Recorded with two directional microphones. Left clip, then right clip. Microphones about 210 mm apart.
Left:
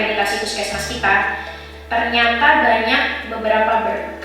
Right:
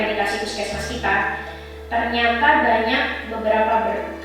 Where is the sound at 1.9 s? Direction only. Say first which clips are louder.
Left 3 dB; 15° right (ahead or behind).